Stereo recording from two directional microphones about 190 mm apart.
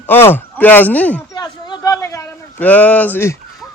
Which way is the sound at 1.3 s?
20° left (ahead or behind).